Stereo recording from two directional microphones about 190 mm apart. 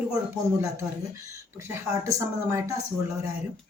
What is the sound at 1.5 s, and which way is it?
A woman's voice, 15° right (ahead or behind).